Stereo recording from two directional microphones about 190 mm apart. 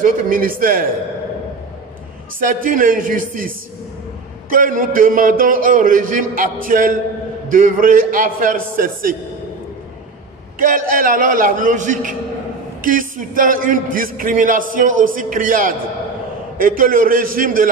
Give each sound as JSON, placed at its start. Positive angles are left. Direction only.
{"t": 0.0, "sound": "a man's voice", "side_deg": -45}
{"t": 2.4, "sound": "a man's voice", "side_deg": -45}
{"t": 10.6, "sound": "a man's voice", "side_deg": -45}